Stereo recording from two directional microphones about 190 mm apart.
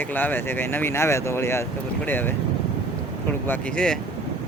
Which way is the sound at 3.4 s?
10° left (ahead or behind).